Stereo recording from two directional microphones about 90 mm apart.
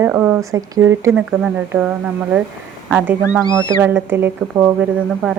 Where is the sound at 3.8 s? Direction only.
25° right (ahead or behind).